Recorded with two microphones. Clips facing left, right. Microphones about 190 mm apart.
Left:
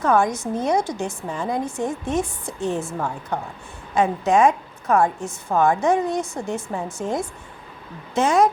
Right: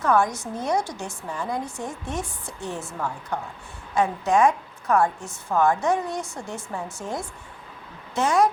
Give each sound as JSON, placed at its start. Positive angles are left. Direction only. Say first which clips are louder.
{"t": 0.0, "sound": "a woman's voice", "louder": "left 3 dB", "side_deg": 20}
{"t": 4.0, "sound": "a woman's voice", "louder": "left 3 dB", "side_deg": 20}